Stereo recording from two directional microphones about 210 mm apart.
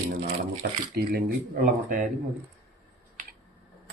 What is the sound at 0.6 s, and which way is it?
Speech, 50° right (ahead or behind).